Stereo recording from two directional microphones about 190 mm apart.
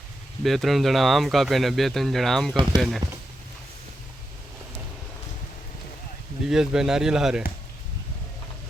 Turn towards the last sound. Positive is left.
turn(degrees=-5)  # may be behind; listen again after turning